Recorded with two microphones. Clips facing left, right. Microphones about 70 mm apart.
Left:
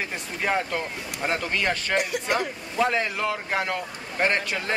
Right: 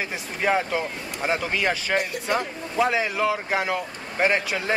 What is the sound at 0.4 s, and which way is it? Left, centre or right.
A man's voice, centre.